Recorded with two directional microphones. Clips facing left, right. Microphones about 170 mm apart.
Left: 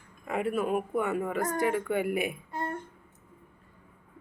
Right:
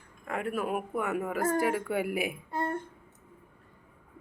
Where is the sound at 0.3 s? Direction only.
5° left (ahead or behind).